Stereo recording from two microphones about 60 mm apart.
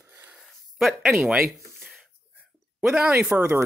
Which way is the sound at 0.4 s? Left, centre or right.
Centre.